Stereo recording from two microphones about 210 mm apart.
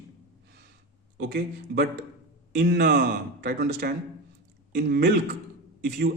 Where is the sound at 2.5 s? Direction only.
55° right (ahead or behind).